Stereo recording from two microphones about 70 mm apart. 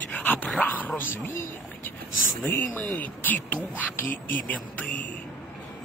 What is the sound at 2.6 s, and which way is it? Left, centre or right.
Speech, left.